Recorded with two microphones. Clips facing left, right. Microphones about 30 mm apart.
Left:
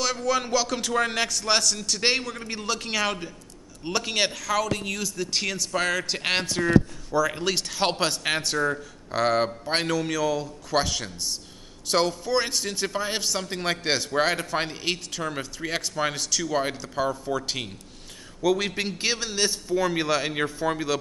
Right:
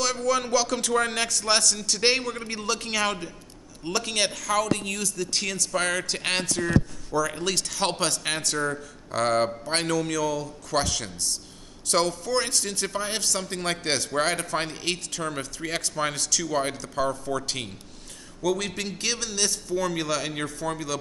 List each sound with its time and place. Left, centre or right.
0.0 s a man's voice: centre
6.4 s a man's voice: left
18.4 s a man's voice: centre